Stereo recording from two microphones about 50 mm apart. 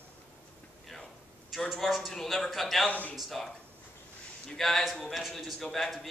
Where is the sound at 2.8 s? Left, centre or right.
Left.